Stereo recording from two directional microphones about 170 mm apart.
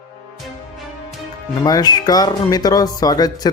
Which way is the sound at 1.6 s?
25° left (ahead or behind).